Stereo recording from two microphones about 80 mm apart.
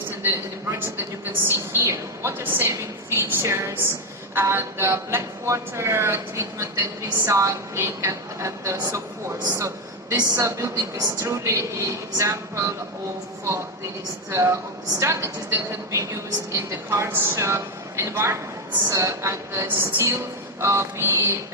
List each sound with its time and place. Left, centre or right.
0.2 s speech: right
2.4 s a woman's voice: right
9.6 s a sound: right
10.2 s speech: right
14.3 s speech: right